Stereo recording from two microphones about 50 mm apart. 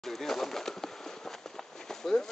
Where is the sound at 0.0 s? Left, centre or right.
Centre.